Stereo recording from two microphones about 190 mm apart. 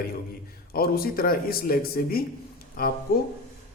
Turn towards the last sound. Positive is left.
turn(degrees=55)  # may be behind; listen again after turning